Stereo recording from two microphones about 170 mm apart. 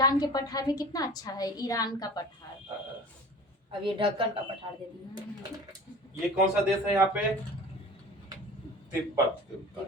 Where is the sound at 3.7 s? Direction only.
30° right (ahead or behind).